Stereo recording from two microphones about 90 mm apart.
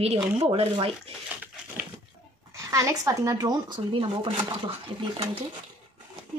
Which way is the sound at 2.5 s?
35° right (ahead or behind).